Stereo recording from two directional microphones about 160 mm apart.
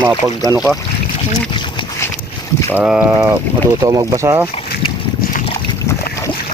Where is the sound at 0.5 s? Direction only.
Centre (ahead or behind).